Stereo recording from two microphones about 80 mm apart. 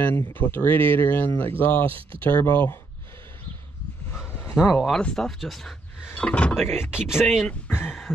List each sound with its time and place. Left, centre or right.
0.0 s speech: left
4.1 s a sound: left
4.7 s speech: centre
6.1 s speech: centre
6.7 s speech: left
7.2 s speech: centre
7.6 s speech: left